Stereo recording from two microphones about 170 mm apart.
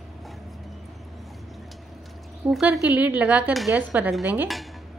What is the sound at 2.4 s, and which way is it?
A woman's voice, 5° right (ahead or behind).